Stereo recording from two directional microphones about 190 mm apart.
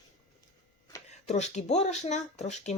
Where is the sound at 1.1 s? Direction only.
35° left (ahead or behind).